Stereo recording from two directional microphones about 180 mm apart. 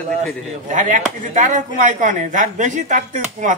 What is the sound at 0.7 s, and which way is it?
Speech, 45° right (ahead or behind).